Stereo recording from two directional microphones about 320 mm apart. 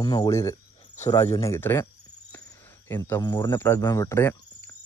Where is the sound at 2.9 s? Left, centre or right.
Centre.